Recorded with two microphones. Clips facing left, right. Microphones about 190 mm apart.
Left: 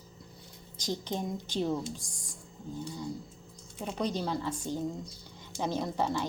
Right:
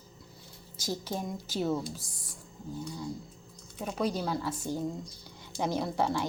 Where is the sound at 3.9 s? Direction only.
5° right (ahead or behind).